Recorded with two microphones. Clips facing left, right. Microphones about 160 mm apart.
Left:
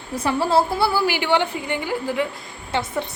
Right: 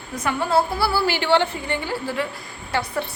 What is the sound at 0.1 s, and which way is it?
Speech, 30° left (ahead or behind).